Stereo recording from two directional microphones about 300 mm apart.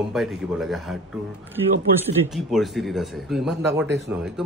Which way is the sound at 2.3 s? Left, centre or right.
Centre.